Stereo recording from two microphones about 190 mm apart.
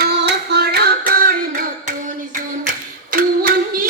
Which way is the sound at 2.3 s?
45° right (ahead or behind).